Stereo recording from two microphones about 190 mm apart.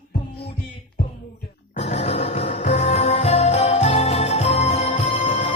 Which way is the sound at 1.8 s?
35° left (ahead or behind).